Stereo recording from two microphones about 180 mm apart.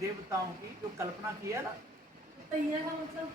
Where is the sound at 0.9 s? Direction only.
15° right (ahead or behind).